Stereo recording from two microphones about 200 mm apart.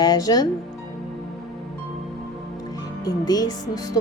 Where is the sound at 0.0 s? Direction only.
20° left (ahead or behind).